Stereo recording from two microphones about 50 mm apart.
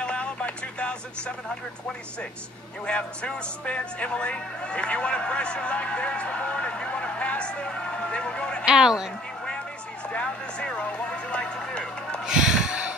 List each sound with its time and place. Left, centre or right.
0.0 s telephone: left
2.9 s speech: centre
8.6 s speech: centre
10.0 s speech: left
11.7 s music: centre
12.3 s snort: centre